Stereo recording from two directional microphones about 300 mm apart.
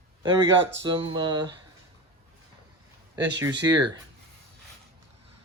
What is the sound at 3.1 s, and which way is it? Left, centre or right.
Speech, centre.